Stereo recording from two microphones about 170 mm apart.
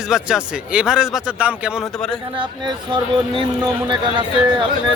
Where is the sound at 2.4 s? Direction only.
30° right (ahead or behind).